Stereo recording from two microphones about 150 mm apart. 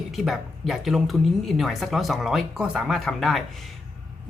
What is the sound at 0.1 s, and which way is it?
Speech, centre (ahead or behind).